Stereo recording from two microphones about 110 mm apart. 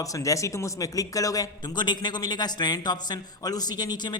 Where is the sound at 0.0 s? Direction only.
30° left (ahead or behind).